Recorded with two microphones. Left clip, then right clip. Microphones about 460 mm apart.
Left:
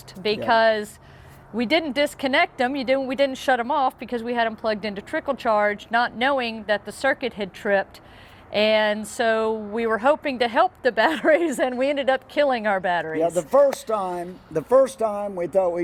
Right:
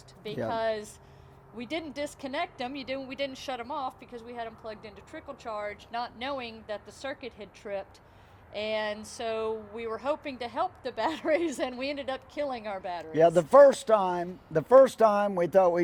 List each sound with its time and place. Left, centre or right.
0.2 s speech: left
13.1 s speech: right